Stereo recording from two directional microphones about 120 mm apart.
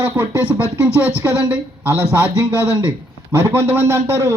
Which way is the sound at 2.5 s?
25° left (ahead or behind).